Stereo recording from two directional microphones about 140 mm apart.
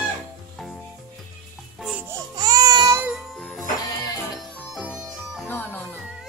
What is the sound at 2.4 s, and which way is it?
Baby cry, 30° right (ahead or behind).